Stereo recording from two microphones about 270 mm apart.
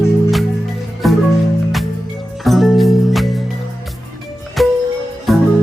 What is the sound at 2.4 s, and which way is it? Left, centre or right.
Music, centre.